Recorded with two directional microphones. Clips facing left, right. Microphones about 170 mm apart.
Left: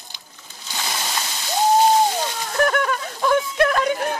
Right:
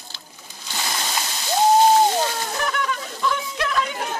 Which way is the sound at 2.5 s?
50° left (ahead or behind).